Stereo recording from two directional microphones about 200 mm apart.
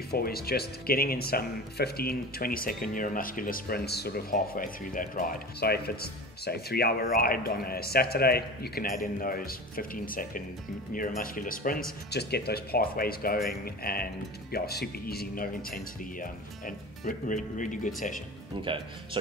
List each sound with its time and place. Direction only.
0.1 s speech: 50° left (ahead or behind)